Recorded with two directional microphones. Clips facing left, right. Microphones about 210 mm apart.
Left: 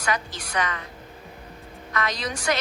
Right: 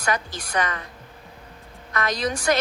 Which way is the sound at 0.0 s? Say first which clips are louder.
Right 2 dB; 50° right (ahead or behind).